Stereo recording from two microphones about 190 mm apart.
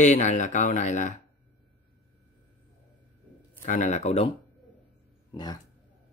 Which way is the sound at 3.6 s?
40° left (ahead or behind).